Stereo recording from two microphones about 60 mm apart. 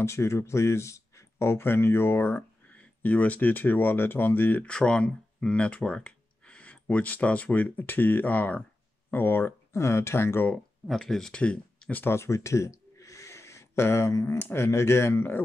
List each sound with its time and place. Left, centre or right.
0.0 s speech: left
2.7 s speech: left
4.6 s speech: centre; by 9.5 s left
9.7 s speech: left
10.9 s speech: centre
11.3 s speech: centre
12.0 s a sound: left
14.3 s speech: left